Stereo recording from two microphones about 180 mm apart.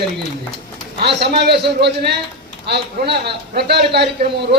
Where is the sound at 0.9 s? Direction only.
65° right (ahead or behind).